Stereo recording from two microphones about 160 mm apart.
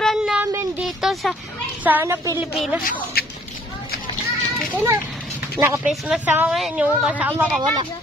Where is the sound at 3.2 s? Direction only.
70° left (ahead or behind).